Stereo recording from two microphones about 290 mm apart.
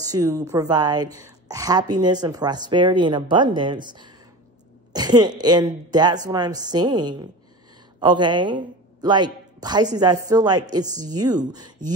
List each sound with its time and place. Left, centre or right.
0.0 s a woman's voice: centre